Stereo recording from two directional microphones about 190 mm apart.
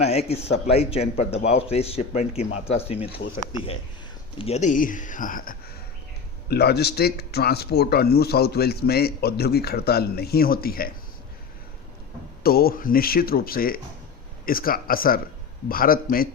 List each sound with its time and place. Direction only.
0.0 s speech: 35° left (ahead or behind)
4.4 s speech: 35° left (ahead or behind)
6.5 s speech: 55° left (ahead or behind)
12.4 s speech: 50° left (ahead or behind)